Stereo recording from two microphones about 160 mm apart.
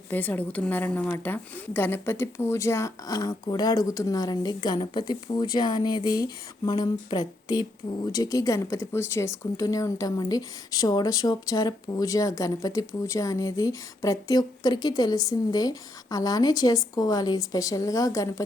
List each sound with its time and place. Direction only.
0.1 s speech: 10° left (ahead or behind)